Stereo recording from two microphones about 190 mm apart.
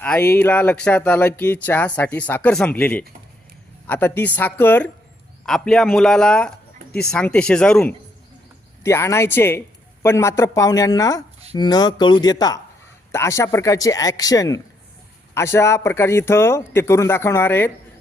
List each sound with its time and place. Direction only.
0.0 s a man's voice: 10° left (ahead or behind)